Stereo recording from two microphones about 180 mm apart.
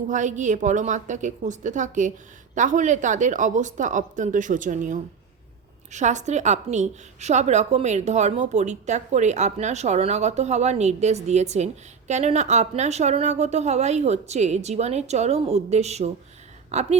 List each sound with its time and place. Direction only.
0.1 s a woman's voice: 45° right (ahead or behind)